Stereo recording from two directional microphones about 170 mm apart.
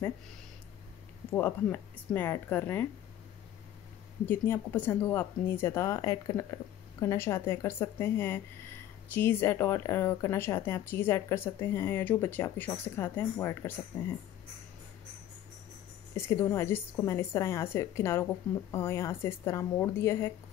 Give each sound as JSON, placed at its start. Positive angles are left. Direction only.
{"t": 1.3, "sound": "speech", "side_deg": 10}
{"t": 4.3, "sound": "speech", "side_deg": 10}
{"t": 16.2, "sound": "speech", "side_deg": 15}